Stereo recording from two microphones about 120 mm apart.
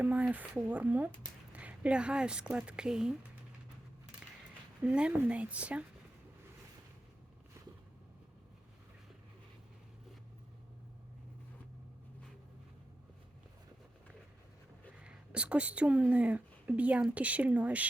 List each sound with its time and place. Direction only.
0.0 s speech: 10° right (ahead or behind)
4.8 s speech: 10° right (ahead or behind)
15.0 s speech: 10° right (ahead or behind)